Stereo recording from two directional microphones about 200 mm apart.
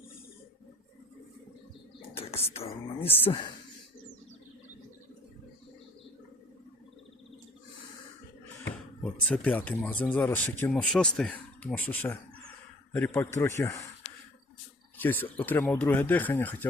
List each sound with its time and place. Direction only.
2.0 s speech: 30° left (ahead or behind)
9.2 s speech: 5° left (ahead or behind)
14.9 s speech: 10° left (ahead or behind)